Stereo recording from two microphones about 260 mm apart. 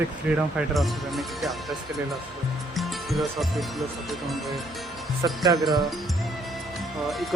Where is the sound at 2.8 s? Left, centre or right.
Centre.